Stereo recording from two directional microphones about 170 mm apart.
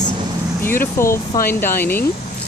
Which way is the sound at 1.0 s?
15° left (ahead or behind).